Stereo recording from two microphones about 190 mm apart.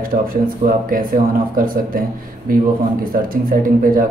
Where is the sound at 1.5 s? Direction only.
50° right (ahead or behind).